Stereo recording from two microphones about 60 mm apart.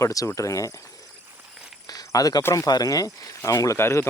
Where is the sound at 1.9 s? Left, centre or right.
Left.